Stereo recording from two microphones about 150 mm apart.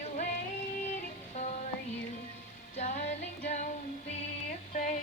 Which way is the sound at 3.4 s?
55° left (ahead or behind).